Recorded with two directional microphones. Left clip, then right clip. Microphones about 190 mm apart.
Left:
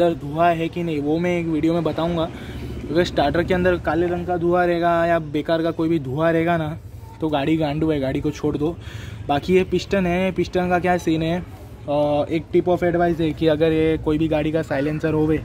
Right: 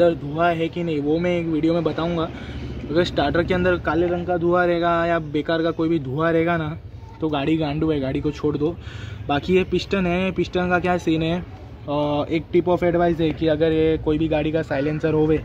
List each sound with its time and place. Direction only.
0.0 s a man's voice: 20° left (ahead or behind); by 13.3 s centre (ahead or behind)
13.4 s a man's voice: 25° left (ahead or behind)